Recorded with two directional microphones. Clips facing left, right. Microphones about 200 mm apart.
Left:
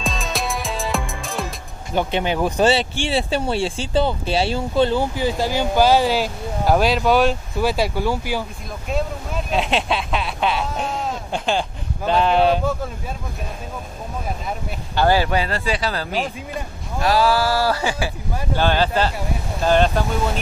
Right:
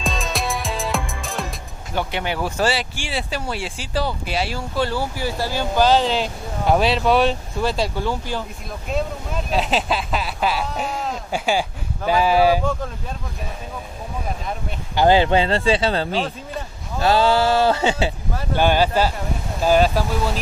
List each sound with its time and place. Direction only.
0.0 s music: centre (ahead or behind)
2.0 s speech: 20° left (ahead or behind); by 12.6 s 5° right (ahead or behind)
15.0 s speech: 20° right (ahead or behind)
18.6 s speech: 10° right (ahead or behind)